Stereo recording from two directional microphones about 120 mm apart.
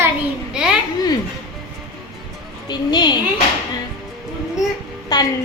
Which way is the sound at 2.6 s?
35° left (ahead or behind).